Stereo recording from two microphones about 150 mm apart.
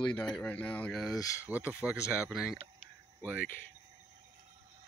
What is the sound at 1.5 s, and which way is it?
Speech, 10° right (ahead or behind).